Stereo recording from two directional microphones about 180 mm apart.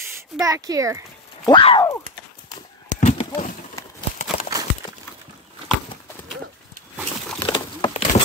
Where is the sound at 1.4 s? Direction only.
30° left (ahead or behind).